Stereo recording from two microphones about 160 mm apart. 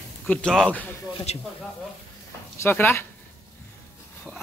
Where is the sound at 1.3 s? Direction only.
40° left (ahead or behind).